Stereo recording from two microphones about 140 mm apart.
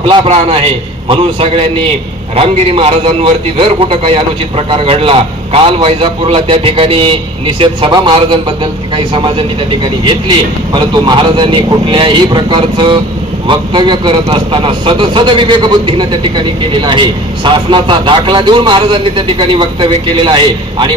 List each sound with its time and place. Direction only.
0.0 s a man's voice: 40° right (ahead or behind)